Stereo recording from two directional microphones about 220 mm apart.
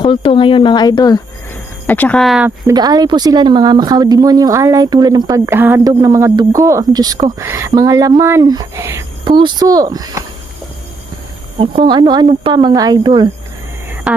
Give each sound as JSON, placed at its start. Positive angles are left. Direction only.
{"t": 0.0, "sound": "speech", "side_deg": 25}
{"t": 1.9, "sound": "speech", "side_deg": 5}
{"t": 2.6, "sound": "speech", "side_deg": -15}
{"t": 11.6, "sound": "speech", "side_deg": -25}
{"t": 14.1, "sound": "hum", "side_deg": -5}